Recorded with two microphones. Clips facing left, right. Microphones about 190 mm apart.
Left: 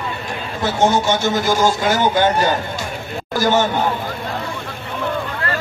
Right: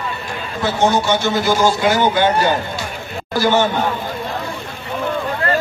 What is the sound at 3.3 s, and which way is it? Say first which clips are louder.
Speech: right 1 dB; 45° left (ahead or behind).